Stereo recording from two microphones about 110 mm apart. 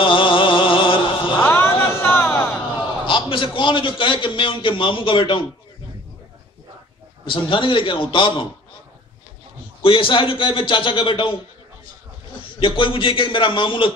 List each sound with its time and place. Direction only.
0.0 s mantra: 50° left (ahead or behind)
1.4 s a sound: 20° left (ahead or behind)
3.1 s a man's voice: 50° left (ahead or behind)
7.2 s a man's voice: 50° left (ahead or behind)
9.8 s a man's voice: 50° left (ahead or behind)
12.4 s a man's voice: 50° left (ahead or behind)